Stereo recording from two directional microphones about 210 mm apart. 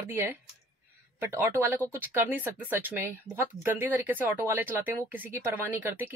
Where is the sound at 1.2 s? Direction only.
10° right (ahead or behind).